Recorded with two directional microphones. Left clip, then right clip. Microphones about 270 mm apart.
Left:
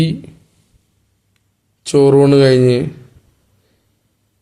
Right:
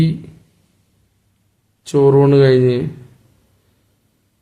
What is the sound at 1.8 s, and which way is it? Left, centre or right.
Speech, centre.